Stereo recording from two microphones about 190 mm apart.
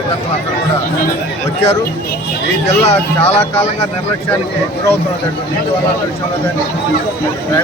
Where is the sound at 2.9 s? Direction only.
30° left (ahead or behind).